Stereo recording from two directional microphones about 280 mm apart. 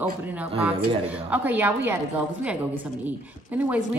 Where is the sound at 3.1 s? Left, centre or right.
Centre.